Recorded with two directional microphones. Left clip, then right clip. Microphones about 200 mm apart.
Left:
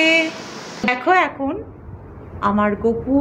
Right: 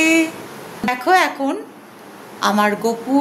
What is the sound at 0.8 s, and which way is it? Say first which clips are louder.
Speech: right 1 dB; 15° right (ahead or behind).